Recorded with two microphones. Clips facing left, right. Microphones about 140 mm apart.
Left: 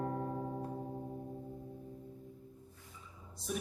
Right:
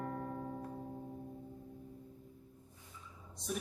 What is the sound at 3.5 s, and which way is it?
Music, centre (ahead or behind).